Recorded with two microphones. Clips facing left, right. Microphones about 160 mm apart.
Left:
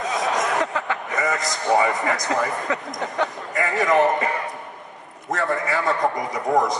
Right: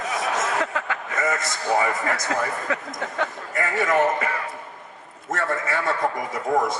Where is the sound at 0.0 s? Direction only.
20° left (ahead or behind).